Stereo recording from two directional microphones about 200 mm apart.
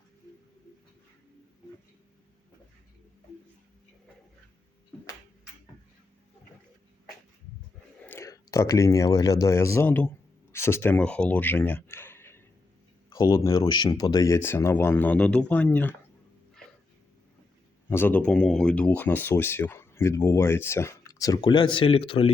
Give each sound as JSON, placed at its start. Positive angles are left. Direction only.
{"t": 8.0, "sound": "speech", "side_deg": 10}
{"t": 17.8, "sound": "speech", "side_deg": 10}